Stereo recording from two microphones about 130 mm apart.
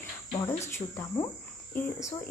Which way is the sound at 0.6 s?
20° left (ahead or behind).